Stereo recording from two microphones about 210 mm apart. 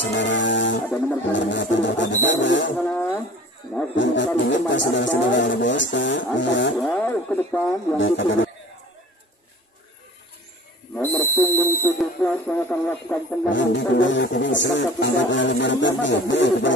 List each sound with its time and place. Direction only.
0.0 s music: 60° left (ahead or behind)
1.3 s speech: 60° left (ahead or behind)
2.8 s speech: centre (ahead or behind)
3.9 s speech: 60° left (ahead or behind)
6.8 s speech: 5° left (ahead or behind)
8.0 s speech: 60° left (ahead or behind)
11.0 s a sound: 10° left (ahead or behind)
12.0 s speech: 5° left (ahead or behind)
13.5 s speech: 60° left (ahead or behind)